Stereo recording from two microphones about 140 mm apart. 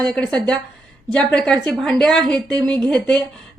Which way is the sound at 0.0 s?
5° left (ahead or behind).